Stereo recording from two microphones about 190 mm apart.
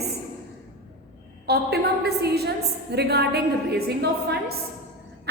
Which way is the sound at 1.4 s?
60° right (ahead or behind).